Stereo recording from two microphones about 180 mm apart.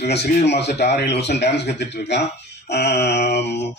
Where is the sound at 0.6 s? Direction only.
35° left (ahead or behind).